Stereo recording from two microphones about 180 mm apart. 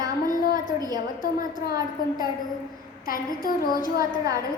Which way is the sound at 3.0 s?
50° left (ahead or behind).